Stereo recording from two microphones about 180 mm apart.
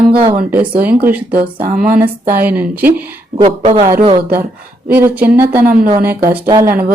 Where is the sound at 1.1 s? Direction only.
55° right (ahead or behind).